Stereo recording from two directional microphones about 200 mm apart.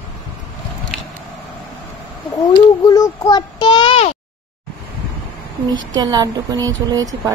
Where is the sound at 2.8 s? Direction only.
20° left (ahead or behind).